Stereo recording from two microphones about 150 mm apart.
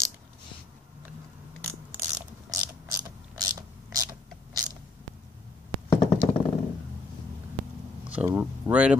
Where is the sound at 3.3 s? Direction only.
25° right (ahead or behind).